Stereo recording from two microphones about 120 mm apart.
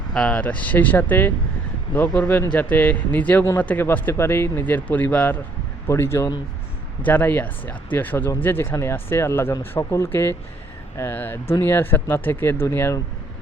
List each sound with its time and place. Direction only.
0.1 s speech: 5° left (ahead or behind); by 13.0 s 25° left (ahead or behind)